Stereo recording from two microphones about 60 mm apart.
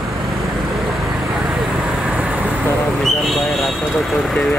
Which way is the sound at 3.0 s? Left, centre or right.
Centre.